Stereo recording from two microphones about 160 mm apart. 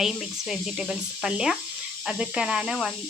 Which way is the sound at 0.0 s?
Centre (ahead or behind).